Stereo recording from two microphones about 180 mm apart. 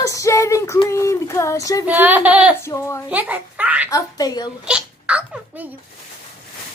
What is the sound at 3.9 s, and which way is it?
Speech, 20° left (ahead or behind).